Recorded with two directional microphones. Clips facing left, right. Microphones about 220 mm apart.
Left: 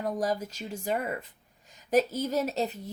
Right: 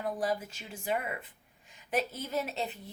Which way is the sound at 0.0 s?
40° left (ahead or behind).